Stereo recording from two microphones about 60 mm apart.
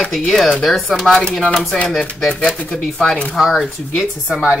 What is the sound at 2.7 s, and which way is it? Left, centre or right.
Speech, centre.